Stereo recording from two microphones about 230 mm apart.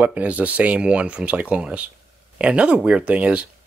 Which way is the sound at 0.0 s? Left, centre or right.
Centre.